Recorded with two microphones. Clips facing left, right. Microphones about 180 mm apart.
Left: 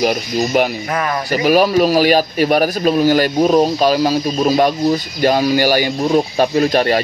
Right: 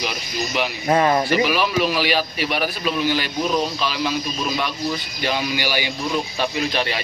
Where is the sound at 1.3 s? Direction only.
40° left (ahead or behind).